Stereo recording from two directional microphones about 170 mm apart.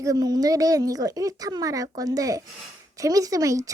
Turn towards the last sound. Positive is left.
turn(degrees=-20)  # may be behind; listen again after turning